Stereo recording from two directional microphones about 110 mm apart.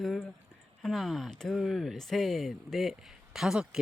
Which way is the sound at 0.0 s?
Centre (ahead or behind).